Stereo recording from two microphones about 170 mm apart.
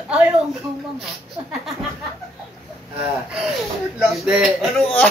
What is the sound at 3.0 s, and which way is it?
Speech, 5° right (ahead or behind).